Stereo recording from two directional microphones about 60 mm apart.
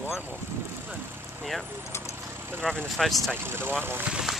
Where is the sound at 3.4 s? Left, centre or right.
Right.